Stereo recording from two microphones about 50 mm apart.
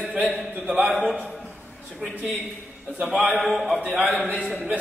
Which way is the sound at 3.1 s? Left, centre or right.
Centre.